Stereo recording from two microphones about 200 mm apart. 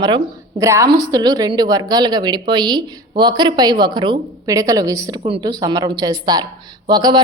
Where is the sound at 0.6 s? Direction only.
15° right (ahead or behind).